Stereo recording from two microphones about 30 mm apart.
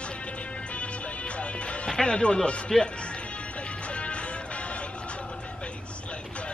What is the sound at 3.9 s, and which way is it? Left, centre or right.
Music, left.